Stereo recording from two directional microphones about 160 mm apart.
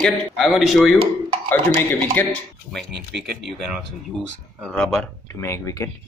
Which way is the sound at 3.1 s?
90° right.